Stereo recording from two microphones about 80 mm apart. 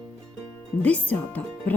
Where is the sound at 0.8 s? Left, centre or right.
Centre.